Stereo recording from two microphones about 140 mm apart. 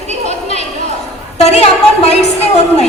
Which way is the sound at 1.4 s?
50° left (ahead or behind).